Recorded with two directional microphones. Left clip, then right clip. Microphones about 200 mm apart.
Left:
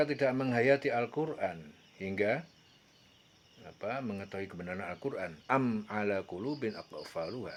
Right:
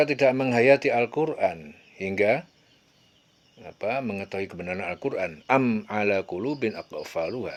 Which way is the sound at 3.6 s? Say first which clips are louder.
Right 9 dB; 35° right (ahead or behind).